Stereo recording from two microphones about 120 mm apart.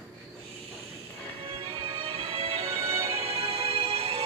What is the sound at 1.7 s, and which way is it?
Music, 45° right (ahead or behind).